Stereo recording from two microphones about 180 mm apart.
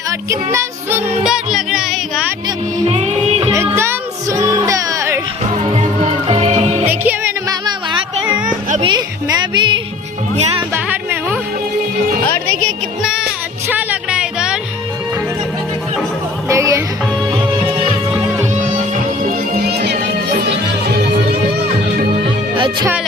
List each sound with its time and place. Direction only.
0.1 s music: 15° right (ahead or behind)
2.8 s music: 35° right (ahead or behind)
3.8 s music: 15° right (ahead or behind)
5.5 s music: 35° right (ahead or behind)
6.8 s music: 10° right (ahead or behind)
8.8 s speech: 20° right (ahead or behind)
10.8 s a sound: 10° right (ahead or behind)
13.7 s music: 5° right (ahead or behind)
16.5 s music: 15° right (ahead or behind)
18.1 s music: 5° right (ahead or behind)
18.5 s music: 45° right (ahead or behind)
19.2 s music: 60° right (ahead or behind)
22.5 s music: 30° right (ahead or behind)